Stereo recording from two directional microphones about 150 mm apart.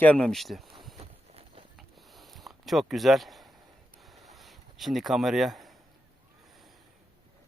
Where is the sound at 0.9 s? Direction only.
40° right (ahead or behind).